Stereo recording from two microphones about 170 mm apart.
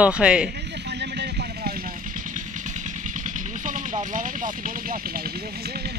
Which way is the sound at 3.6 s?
50° right (ahead or behind).